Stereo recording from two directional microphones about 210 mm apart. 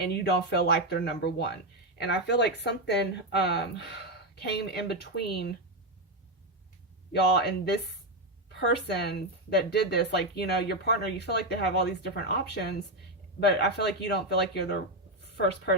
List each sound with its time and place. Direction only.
0.0 s speech: 50° left (ahead or behind)
7.1 s a woman's voice: 50° left (ahead or behind)